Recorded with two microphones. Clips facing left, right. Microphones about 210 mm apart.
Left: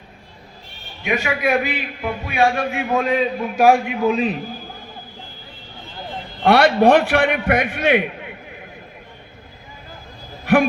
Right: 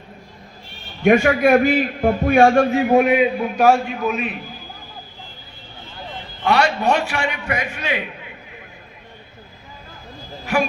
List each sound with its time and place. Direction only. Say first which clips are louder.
1.0 s a man's voice: right 7 dB; 50° right (ahead or behind)
2.8 s a man's voice: right 5 dB; 20° right (ahead or behind)
3.6 s a man's voice: left 1 dB; 10° left (ahead or behind)
4.0 s a man's voice: left 4 dB; 30° left (ahead or behind)
6.4 s a man's voice: left 5 dB; 55° left (ahead or behind)
10.4 s a man's voice: left 5 dB; 55° left (ahead or behind)